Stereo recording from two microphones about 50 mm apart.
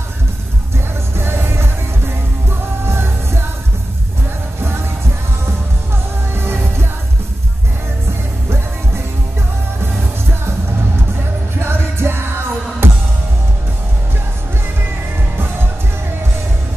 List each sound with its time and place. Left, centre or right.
1.1 s music: right
2.9 s music: right
6.3 s music: right
11.6 s music: right